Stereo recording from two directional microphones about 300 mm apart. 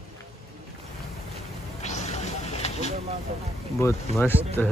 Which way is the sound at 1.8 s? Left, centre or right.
Left.